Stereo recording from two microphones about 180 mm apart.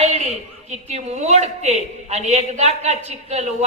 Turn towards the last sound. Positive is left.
turn(degrees=-35)  # may be behind; listen again after turning